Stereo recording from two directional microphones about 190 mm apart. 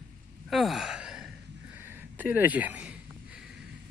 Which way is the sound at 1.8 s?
10° right (ahead or behind).